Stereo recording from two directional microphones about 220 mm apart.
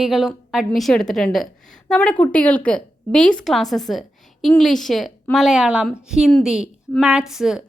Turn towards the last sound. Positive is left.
turn(degrees=0)  # may be behind; listen again after turning